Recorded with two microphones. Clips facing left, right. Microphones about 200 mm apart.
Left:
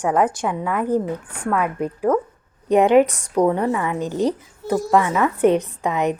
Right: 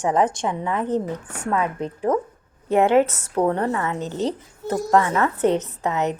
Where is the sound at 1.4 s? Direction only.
25° right (ahead or behind).